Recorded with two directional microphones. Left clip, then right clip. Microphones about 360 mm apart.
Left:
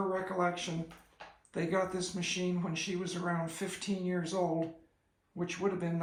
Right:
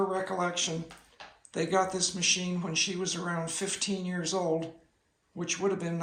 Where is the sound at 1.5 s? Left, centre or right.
Centre.